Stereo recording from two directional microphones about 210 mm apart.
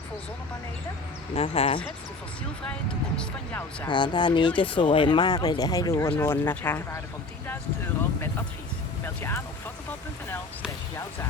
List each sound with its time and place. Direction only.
1.3 s speech: 30° left (ahead or behind)
3.2 s speech: 5° left (ahead or behind)
3.8 s speech: 20° left (ahead or behind)
9.0 s speech: 10° left (ahead or behind)